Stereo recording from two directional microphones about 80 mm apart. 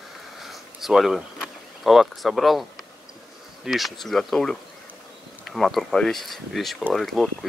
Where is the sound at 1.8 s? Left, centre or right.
Centre.